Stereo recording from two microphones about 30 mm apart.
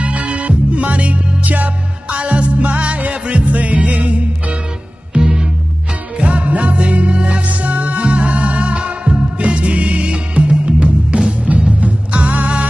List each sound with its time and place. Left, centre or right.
0.0 s music: right
2.0 s music: right
5.1 s music: right
6.1 s music: right
7.4 s music: right